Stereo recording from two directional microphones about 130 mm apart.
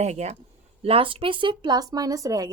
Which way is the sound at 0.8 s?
45° right (ahead or behind).